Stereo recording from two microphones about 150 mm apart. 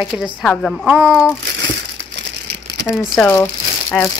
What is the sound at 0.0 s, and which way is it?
A woman's voice, 5° right (ahead or behind).